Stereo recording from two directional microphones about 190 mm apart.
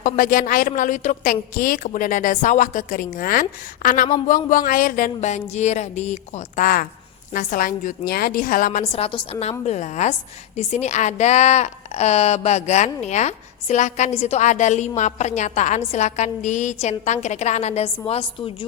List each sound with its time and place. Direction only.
0.0 s a woman's voice: 45° left (ahead or behind)
8.9 s a woman's voice: 30° left (ahead or behind)